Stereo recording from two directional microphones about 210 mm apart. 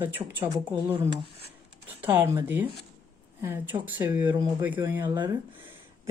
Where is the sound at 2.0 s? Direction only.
15° right (ahead or behind).